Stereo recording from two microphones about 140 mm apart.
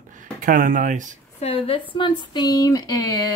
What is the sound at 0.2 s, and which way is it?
Speech, 70° right (ahead or behind).